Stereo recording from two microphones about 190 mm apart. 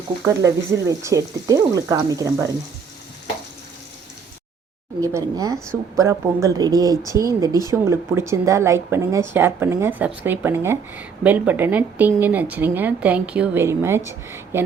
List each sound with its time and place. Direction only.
0.4 s speech: 15° right (ahead or behind)
4.9 s speech: 15° right (ahead or behind)